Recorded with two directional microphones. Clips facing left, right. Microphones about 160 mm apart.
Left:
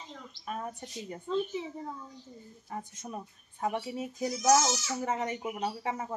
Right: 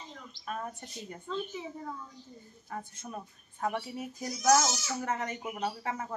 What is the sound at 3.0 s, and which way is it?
Speech, 15° left (ahead or behind).